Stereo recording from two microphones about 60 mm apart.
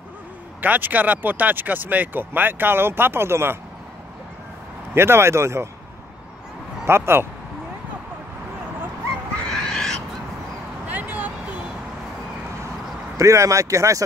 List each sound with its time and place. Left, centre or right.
0.6 s speech: right
4.9 s speech: right
6.9 s speech: right
9.4 s bird: centre
10.9 s a sound: right
13.2 s speech: right